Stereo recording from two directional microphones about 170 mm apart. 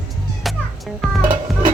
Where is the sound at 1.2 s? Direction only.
50° right (ahead or behind).